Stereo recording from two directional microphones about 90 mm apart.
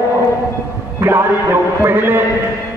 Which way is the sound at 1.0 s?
25° right (ahead or behind).